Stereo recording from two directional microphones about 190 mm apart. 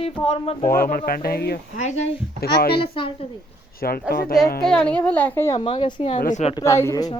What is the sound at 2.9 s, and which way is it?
Speech, 30° left (ahead or behind).